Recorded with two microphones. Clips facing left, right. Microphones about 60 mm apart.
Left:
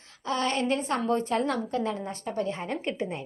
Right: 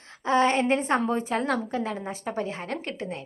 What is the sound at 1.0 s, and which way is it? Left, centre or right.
Speech, centre.